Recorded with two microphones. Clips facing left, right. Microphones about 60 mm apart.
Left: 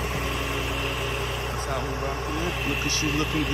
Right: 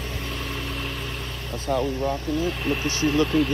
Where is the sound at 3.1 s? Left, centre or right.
Centre.